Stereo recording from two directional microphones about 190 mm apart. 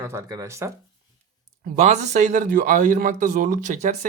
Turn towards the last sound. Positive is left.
turn(degrees=-40)  # may be behind; listen again after turning